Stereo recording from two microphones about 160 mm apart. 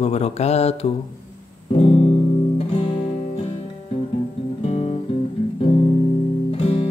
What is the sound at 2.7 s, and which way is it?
Music, 35° left (ahead or behind).